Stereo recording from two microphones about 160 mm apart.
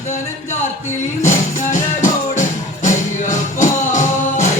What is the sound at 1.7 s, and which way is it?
Music, 50° left (ahead or behind).